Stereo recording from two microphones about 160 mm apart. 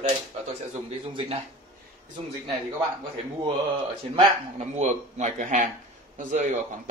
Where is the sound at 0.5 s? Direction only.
40° right (ahead or behind).